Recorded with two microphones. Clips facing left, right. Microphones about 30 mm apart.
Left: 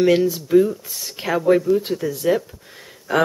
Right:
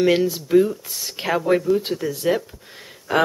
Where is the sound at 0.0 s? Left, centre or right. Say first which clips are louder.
Left 2 dB; centre.